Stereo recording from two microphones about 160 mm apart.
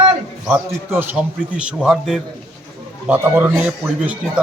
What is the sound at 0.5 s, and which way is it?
A man's voice, 15° right (ahead or behind).